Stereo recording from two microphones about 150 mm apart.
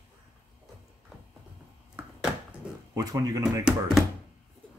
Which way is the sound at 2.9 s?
25° right (ahead or behind).